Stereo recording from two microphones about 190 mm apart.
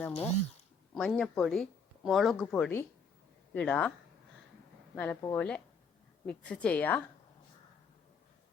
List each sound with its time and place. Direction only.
0.1 s speech: 35° left (ahead or behind)
0.9 s a woman's voice: 5° left (ahead or behind)
4.9 s a woman's voice: 10° left (ahead or behind)